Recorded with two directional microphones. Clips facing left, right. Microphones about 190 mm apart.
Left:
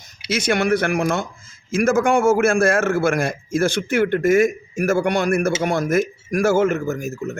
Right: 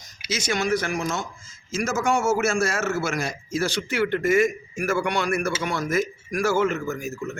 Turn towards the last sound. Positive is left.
turn(degrees=40)  # may be behind; listen again after turning